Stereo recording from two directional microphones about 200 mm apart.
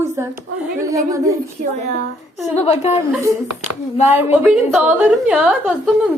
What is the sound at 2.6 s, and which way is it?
Speech, 35° left (ahead or behind).